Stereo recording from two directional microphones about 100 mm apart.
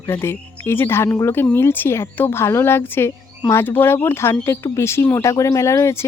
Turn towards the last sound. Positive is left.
turn(degrees=30)  # may be behind; listen again after turning